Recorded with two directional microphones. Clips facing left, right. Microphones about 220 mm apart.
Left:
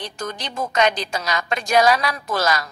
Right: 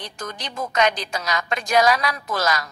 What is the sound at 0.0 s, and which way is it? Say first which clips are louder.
A woman's voice: left 3 dB; 30° left (ahead or behind).